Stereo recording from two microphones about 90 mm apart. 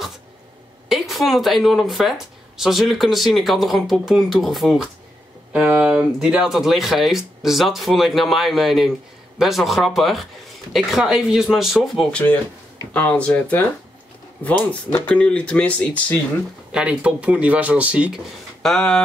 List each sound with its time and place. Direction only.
0.8 s speech: 5° right (ahead or behind)
5.5 s speech: 15° right (ahead or behind)
12.1 s speech: 15° left (ahead or behind)
15.0 s speech: 10° left (ahead or behind)
16.7 s speech: 15° right (ahead or behind)
18.6 s speech: 5° left (ahead or behind)